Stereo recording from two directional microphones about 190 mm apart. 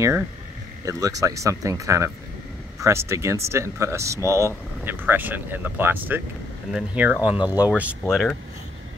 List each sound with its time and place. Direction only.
0.8 s speech: 15° right (ahead or behind)
7.3 s speech: 20° left (ahead or behind)
7.7 s speech: 5° right (ahead or behind)